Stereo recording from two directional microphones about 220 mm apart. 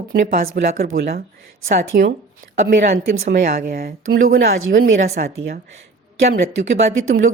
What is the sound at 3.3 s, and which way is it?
A woman's voice, 40° right (ahead or behind).